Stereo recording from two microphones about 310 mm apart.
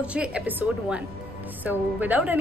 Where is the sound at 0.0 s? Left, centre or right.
Centre.